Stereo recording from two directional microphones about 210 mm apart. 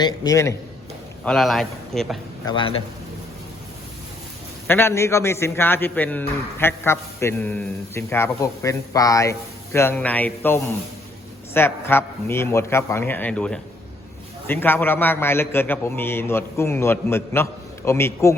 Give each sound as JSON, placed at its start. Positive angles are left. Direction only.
{"t": 0.0, "sound": "a man's voice", "side_deg": 20}
{"t": 1.2, "sound": "a man's voice", "side_deg": 0}
{"t": 2.4, "sound": "a man's voice", "side_deg": 20}
{"t": 4.6, "sound": "a man's voice", "side_deg": 10}